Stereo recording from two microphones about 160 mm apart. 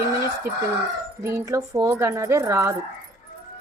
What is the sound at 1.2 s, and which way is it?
Speech, 20° right (ahead or behind).